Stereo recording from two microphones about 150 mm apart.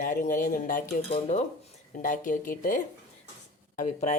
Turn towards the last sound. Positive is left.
turn(degrees=60)  # may be behind; listen again after turning